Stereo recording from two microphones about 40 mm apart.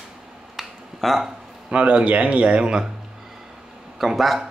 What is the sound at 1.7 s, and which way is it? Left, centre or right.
Speech, right.